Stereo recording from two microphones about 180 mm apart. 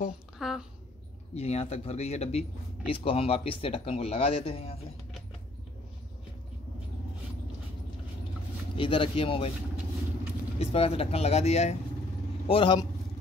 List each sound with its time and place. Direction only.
0.4 s a sound: centre (ahead or behind)
1.3 s speech: 35° left (ahead or behind)
8.7 s speech: 30° left (ahead or behind)
10.6 s speech: 35° left (ahead or behind)